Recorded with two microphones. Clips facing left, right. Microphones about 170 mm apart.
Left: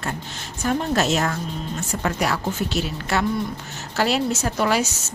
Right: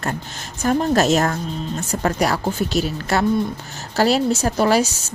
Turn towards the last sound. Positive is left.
turn(degrees=-35)  # may be behind; listen again after turning